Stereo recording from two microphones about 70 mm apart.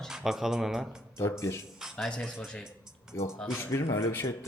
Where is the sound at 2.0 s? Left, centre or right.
Centre.